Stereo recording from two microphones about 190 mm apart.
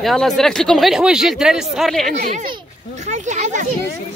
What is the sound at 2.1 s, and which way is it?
Speech, 40° right (ahead or behind).